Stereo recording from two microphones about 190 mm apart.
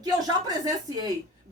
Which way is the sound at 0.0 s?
20° right (ahead or behind).